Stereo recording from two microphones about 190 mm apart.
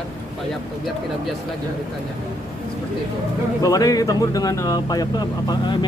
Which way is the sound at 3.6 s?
20° left (ahead or behind).